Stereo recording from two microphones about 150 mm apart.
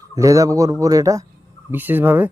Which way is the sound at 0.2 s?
20° right (ahead or behind).